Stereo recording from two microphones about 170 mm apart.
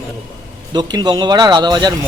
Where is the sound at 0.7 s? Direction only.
25° right (ahead or behind).